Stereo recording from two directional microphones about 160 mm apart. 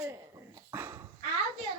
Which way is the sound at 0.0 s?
15° right (ahead or behind).